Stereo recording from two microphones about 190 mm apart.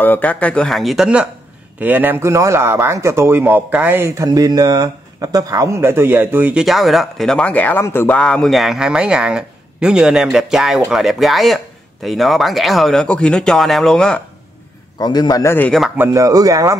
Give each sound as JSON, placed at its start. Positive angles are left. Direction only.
{"t": 0.0, "sound": "speech", "side_deg": 10}
{"t": 15.0, "sound": "a man's voice", "side_deg": 20}
{"t": 16.0, "sound": "speech", "side_deg": -15}